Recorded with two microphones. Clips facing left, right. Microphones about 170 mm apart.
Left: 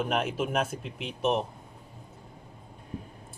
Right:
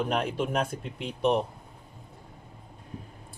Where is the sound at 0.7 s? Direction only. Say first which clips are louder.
Right 1 dB; 30° right (ahead or behind).